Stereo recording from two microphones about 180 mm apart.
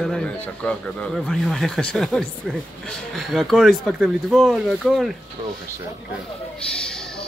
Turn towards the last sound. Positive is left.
turn(degrees=5)  # may be behind; listen again after turning